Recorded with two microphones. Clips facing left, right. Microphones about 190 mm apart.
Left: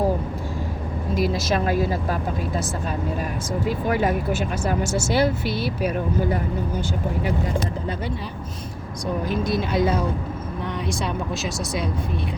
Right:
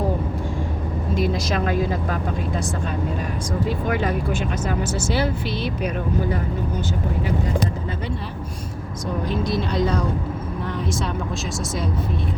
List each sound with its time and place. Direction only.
1.1 s speech: 5° left (ahead or behind)
3.8 s speech: 40° left (ahead or behind)
4.3 s speech: 5° left (ahead or behind)
9.2 s speech: 5° left (ahead or behind)